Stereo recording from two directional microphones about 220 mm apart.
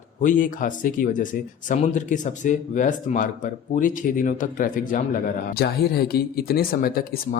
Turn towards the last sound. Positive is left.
turn(degrees=40)  # may be behind; listen again after turning